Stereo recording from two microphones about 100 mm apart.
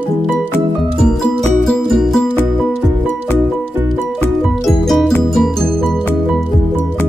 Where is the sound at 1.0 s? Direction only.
5° left (ahead or behind).